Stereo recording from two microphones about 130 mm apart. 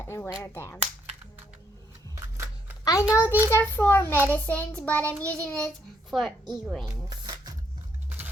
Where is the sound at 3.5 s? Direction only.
20° left (ahead or behind).